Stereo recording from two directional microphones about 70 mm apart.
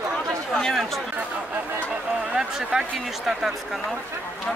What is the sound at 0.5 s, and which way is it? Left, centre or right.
Speech, centre.